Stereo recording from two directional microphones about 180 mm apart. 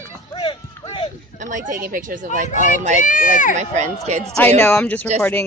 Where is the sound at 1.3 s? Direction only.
45° right (ahead or behind).